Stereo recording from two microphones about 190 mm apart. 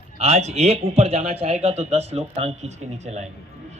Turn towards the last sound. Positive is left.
turn(degrees=-35)  # may be behind; listen again after turning